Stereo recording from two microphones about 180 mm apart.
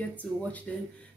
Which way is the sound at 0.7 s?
5° left (ahead or behind).